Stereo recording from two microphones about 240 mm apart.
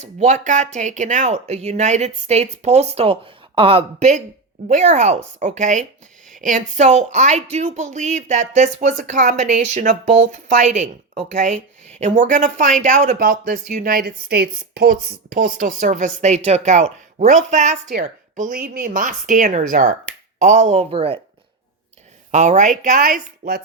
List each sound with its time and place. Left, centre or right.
0.2 s speech: right
22.3 s speech: right